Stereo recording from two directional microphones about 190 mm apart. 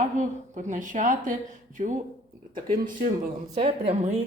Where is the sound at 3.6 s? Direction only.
30° right (ahead or behind).